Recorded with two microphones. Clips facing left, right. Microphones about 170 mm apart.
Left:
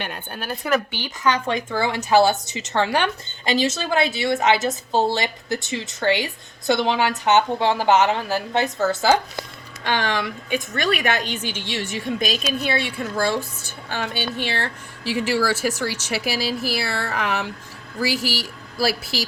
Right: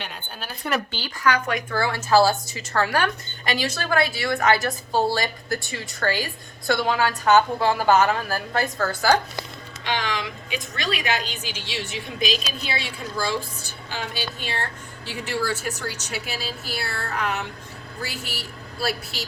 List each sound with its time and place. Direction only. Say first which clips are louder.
0.0 s a woman's voice: left 5 dB; 60° left (ahead or behind)
0.9 s speech: left 1 dB; 20° left (ahead or behind)
9.8 s a woman's voice: left 4 dB; 55° left (ahead or behind); by 19.2 s 90° left